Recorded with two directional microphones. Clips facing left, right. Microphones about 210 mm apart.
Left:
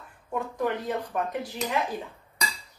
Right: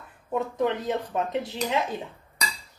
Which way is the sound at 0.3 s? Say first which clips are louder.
Right 3 dB; 20° right (ahead or behind).